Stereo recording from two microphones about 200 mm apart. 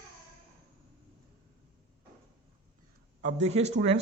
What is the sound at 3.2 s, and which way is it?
Speech, 35° right (ahead or behind).